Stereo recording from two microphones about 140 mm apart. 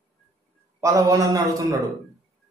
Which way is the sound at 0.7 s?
20° right (ahead or behind).